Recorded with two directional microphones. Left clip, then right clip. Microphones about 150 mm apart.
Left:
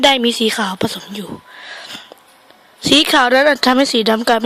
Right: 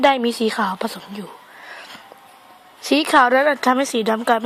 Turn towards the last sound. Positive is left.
turn(degrees=25)  # may be behind; listen again after turning